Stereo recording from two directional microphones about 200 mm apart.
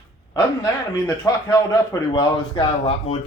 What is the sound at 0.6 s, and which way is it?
Speech, 15° left (ahead or behind).